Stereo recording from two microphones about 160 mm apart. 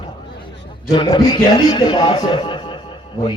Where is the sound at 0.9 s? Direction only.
30° left (ahead or behind).